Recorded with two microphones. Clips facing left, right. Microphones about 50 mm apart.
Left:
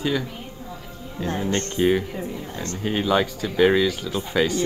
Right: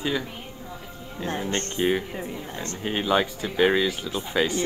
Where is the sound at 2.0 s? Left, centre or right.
Right.